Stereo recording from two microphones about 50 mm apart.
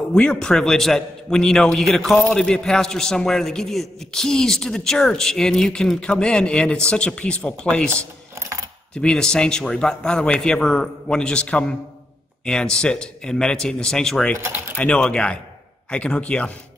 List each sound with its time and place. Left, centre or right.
0.1 s a man's voice: centre
5.9 s speech: left
8.9 s a man's voice: centre